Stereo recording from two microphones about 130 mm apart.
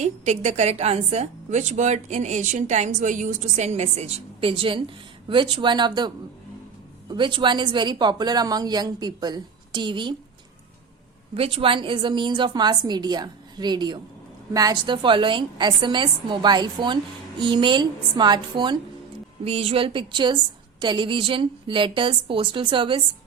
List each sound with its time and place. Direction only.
0.0 s a woman's voice: 65° right (ahead or behind); by 6.1 s 35° right (ahead or behind)
7.1 s a woman's voice: 40° right (ahead or behind)
11.3 s a woman's voice: 45° right (ahead or behind)
19.5 s a woman's voice: 50° right (ahead or behind)